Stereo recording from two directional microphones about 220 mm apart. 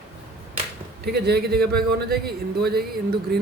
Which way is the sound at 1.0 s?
50° right (ahead or behind).